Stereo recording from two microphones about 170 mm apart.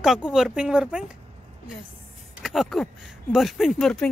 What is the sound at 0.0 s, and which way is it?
Speech, 5° right (ahead or behind).